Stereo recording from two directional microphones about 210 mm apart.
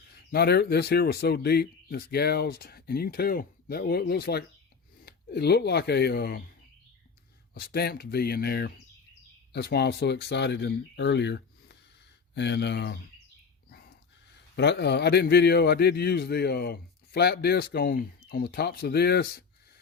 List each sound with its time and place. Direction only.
0.3 s a man's voice: 50° left (ahead or behind)
7.5 s a man's voice: 50° left (ahead or behind)
14.5 s a man's voice: 55° left (ahead or behind)